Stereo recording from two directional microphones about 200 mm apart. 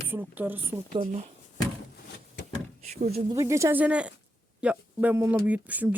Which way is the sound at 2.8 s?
35° right (ahead or behind).